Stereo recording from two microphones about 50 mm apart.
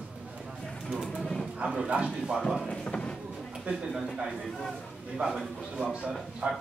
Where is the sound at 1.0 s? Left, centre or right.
Centre.